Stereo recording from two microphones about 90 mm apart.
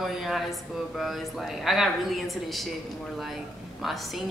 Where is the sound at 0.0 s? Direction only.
Centre (ahead or behind).